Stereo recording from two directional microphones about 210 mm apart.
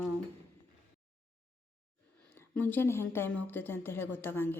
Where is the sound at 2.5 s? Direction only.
10° left (ahead or behind).